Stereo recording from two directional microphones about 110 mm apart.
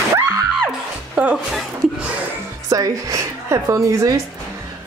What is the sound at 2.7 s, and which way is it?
A woman's voice, 30° right (ahead or behind).